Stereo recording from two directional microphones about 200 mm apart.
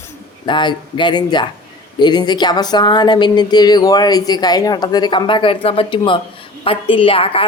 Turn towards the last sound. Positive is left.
turn(degrees=25)  # may be behind; listen again after turning